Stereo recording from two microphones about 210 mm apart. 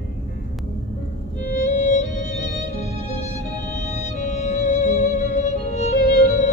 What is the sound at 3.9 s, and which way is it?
Music, 35° left (ahead or behind).